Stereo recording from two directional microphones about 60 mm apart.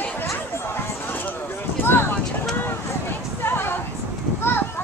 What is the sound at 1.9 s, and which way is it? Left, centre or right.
Clip-clop, left.